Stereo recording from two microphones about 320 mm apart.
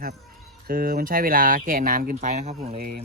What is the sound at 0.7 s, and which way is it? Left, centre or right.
Speech, right.